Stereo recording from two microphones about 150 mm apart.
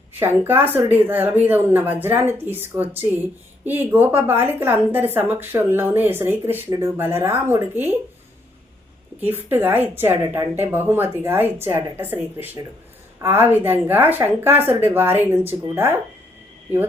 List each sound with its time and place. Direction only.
0.1 s a woman's voice: 15° right (ahead or behind)
9.2 s a woman's voice: 15° right (ahead or behind)